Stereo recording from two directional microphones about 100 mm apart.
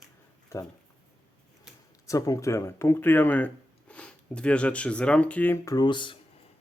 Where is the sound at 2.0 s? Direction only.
35° left (ahead or behind); by 5.5 s 15° left (ahead or behind).